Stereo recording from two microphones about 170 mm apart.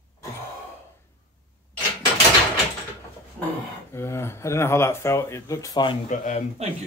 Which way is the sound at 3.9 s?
15° left (ahead or behind).